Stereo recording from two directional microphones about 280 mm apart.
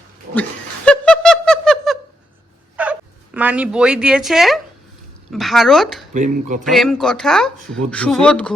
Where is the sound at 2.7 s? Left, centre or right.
Centre.